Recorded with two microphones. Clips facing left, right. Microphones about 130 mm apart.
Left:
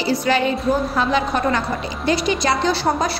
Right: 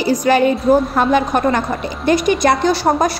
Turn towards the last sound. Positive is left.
turn(degrees=-50)  # may be behind; listen again after turning